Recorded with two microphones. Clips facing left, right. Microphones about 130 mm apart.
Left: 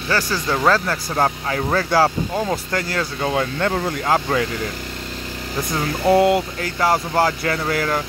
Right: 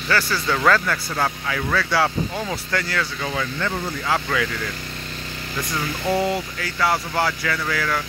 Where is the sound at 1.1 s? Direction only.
35° left (ahead or behind); by 3.8 s 50° left (ahead or behind).